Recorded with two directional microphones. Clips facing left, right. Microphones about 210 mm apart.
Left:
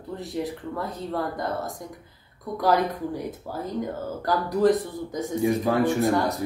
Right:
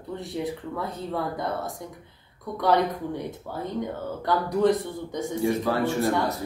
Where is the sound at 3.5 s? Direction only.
5° left (ahead or behind).